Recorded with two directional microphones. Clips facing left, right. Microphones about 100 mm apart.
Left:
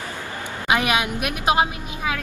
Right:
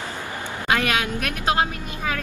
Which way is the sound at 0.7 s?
15° left (ahead or behind).